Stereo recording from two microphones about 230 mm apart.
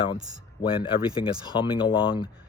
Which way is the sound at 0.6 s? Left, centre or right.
Left.